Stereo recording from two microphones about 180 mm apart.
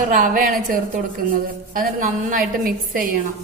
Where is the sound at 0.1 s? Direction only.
50° right (ahead or behind).